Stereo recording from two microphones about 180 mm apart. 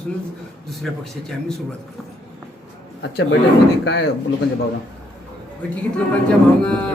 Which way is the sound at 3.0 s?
70° left (ahead or behind).